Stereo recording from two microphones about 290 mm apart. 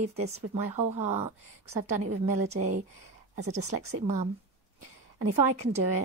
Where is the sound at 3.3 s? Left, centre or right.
Right.